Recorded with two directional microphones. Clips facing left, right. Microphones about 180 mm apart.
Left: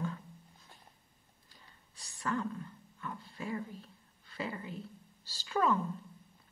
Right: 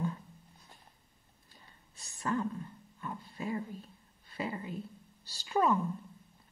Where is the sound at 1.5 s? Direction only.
20° right (ahead or behind).